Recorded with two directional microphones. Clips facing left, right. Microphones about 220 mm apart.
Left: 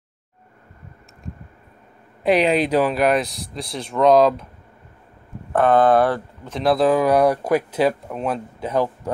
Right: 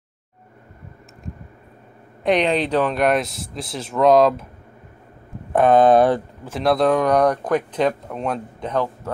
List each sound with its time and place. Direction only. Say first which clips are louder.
2.2 s speech: left 1 dB; 5° left (ahead or behind)
5.5 s speech: right 2 dB; 15° right (ahead or behind)
6.4 s speech: left 1 dB; centre (ahead or behind)